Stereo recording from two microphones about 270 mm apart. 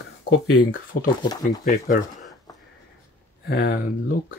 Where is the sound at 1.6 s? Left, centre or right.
Left.